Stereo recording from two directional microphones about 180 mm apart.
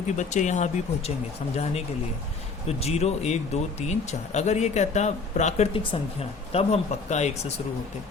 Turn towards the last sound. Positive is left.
turn(degrees=40)  # may be behind; listen again after turning